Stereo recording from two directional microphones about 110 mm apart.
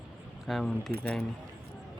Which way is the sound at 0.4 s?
5° left (ahead or behind).